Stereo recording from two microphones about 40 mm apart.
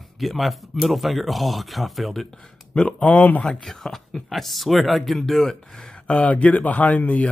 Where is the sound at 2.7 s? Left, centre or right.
Left.